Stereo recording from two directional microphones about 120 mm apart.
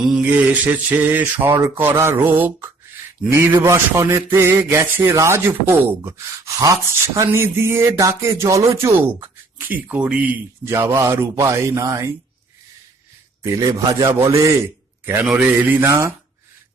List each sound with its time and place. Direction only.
0.0 s mantra: 10° right (ahead or behind)
3.2 s speech: 20° right (ahead or behind)
10.7 s speech: 20° right (ahead or behind)
13.4 s a man's voice: 25° right (ahead or behind)
15.3 s mantra: 10° right (ahead or behind)
15.9 s speech: 25° right (ahead or behind)